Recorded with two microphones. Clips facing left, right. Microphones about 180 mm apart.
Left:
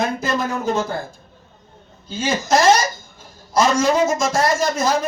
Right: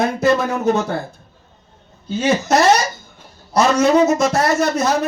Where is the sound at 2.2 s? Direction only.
65° right (ahead or behind).